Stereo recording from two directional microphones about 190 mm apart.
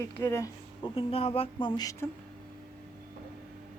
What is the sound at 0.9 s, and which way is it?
Speech, 30° left (ahead or behind).